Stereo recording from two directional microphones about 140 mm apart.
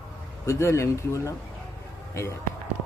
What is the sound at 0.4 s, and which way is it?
Speech, 20° left (ahead or behind).